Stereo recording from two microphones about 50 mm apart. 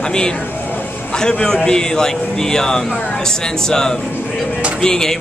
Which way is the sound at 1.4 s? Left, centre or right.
Centre.